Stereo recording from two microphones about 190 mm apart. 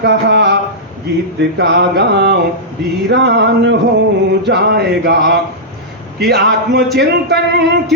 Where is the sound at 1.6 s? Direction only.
65° right (ahead or behind).